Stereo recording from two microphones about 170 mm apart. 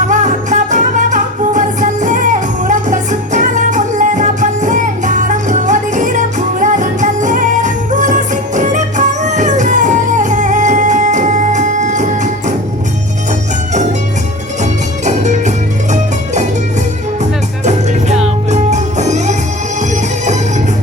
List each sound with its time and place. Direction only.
0.1 s music: 45° right (ahead or behind)
14.6 s music: 45° right (ahead or behind)
18.5 s music: 45° right (ahead or behind)